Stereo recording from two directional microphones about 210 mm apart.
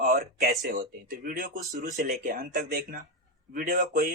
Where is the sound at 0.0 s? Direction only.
45° right (ahead or behind).